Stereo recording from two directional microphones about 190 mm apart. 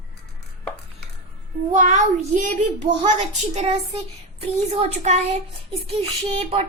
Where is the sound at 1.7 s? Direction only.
40° right (ahead or behind).